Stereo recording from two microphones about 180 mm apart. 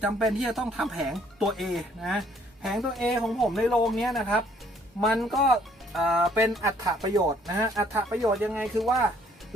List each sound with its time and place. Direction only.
0.0 s speech: centre (ahead or behind)
6.6 s speech: 20° right (ahead or behind); by 9.0 s centre (ahead or behind)